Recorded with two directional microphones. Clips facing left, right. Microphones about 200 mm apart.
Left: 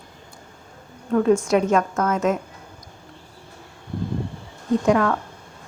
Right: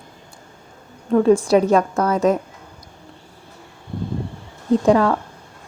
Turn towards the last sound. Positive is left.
turn(degrees=-30)  # may be behind; listen again after turning